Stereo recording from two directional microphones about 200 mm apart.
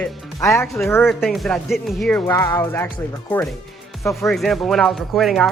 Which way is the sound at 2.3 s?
15° left (ahead or behind).